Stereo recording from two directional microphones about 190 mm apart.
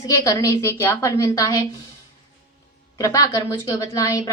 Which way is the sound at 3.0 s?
15° left (ahead or behind).